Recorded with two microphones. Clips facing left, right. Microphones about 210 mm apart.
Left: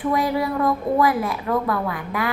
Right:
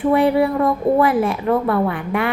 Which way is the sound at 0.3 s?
30° right (ahead or behind).